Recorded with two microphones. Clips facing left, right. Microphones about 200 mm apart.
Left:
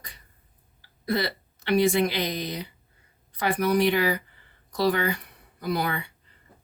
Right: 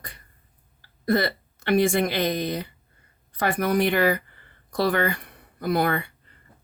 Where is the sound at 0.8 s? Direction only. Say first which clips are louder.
Right 4 dB; 50° right (ahead or behind).